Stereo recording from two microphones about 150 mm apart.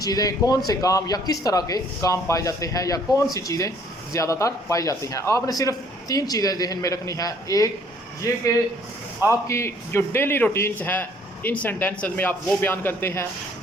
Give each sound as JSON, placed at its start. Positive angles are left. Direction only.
{"t": 0.0, "sound": "a man's voice", "side_deg": 25}
{"t": 9.5, "sound": "a man's voice", "side_deg": 20}